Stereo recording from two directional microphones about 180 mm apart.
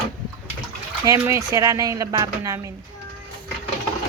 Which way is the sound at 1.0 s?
15° right (ahead or behind).